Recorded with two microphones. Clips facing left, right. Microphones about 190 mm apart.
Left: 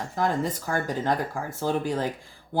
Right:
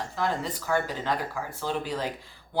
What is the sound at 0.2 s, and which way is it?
Speech, 45° left (ahead or behind).